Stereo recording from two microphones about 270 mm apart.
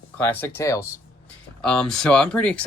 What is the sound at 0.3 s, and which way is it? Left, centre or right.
Speech, centre.